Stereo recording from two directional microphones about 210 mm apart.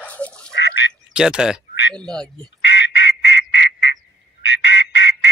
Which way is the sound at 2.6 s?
55° left (ahead or behind).